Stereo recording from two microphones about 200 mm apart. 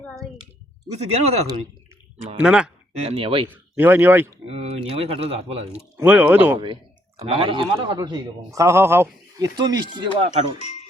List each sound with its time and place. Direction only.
0.0 s a sound: centre (ahead or behind)
0.9 s speech: 30° right (ahead or behind)
2.4 s speech: 5° right (ahead or behind)
2.9 s a man's voice: 30° right (ahead or behind)
3.5 s speech: 10° right (ahead or behind)
4.4 s a man's voice: 30° right (ahead or behind)
5.7 s speech: 10° right (ahead or behind)
7.2 s a man's voice: 25° right (ahead or behind)
10.6 s speech: 35° left (ahead or behind)